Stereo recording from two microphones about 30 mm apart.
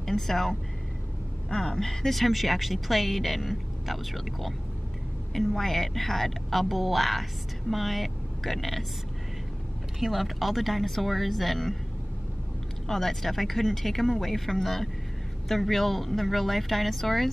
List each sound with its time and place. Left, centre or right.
0.0 s a woman's voice: centre
1.8 s speech: centre
9.9 s speech: centre
12.8 s speech: centre